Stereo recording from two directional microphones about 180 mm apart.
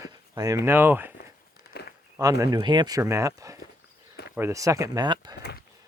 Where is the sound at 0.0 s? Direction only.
20° right (ahead or behind).